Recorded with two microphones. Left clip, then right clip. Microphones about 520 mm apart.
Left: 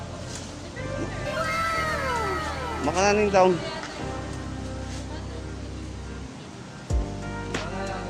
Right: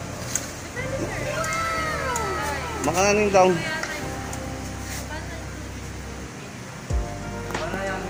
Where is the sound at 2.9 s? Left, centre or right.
Left.